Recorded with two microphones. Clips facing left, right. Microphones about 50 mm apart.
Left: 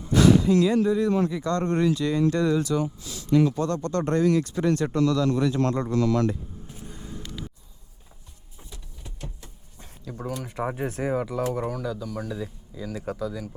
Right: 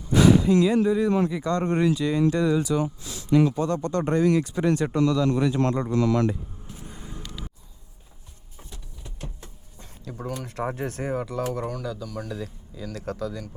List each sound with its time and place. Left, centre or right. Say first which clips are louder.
0.1 s speech: even; centre
3.0 s speech: even; right
3.5 s speech: right 1 dB; centre
6.9 s vehicle: left 3 dB; centre
10.0 s speech: even; centre